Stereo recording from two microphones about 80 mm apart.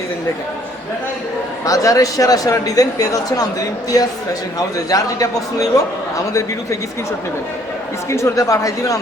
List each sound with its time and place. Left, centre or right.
1.6 s a man's voice: left
4.9 s a man's voice: left
8.1 s a man's voice: left